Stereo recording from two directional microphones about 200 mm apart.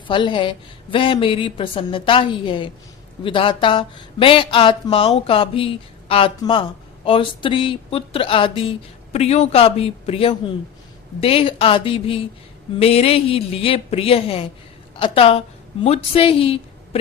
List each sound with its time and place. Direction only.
0.1 s a woman's voice: 25° left (ahead or behind)